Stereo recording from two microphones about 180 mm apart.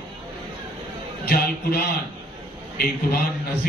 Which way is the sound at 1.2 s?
55° left (ahead or behind).